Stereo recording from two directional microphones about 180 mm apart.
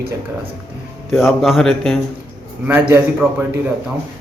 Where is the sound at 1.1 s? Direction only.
Centre (ahead or behind).